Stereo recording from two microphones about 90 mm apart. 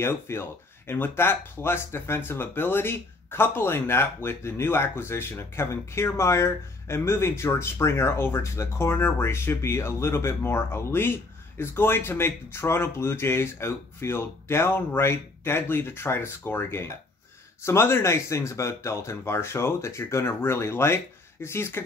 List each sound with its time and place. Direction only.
0.0 s speech: 25° left (ahead or behind)